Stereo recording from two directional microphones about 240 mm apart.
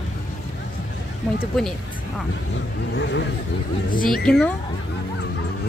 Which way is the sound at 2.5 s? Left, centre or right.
Left.